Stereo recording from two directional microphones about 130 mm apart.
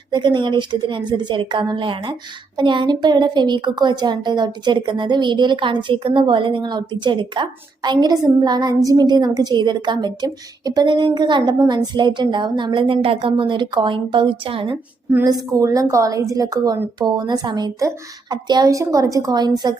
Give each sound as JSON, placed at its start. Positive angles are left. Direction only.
{"t": 0.1, "sound": "a woman's voice", "side_deg": -35}
{"t": 15.5, "sound": "a woman's voice", "side_deg": -25}